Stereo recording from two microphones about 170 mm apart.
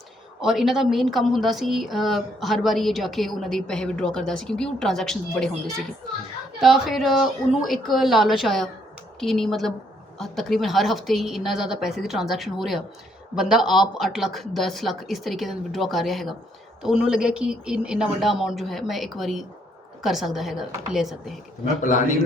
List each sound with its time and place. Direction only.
0.4 s a woman's voice: centre (ahead or behind)
21.8 s a man's voice: 45° left (ahead or behind)